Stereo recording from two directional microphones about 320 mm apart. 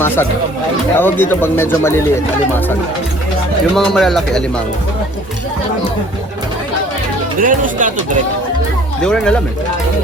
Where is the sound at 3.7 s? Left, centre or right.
Centre.